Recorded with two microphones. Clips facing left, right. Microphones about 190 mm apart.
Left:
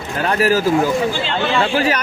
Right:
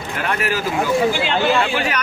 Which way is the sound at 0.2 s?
35° left (ahead or behind).